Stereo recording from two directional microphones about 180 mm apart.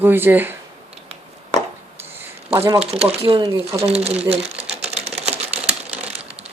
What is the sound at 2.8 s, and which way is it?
Speech, 35° right (ahead or behind).